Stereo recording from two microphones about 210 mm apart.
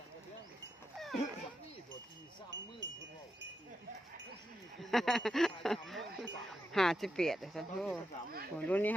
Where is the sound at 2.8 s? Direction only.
60° right (ahead or behind).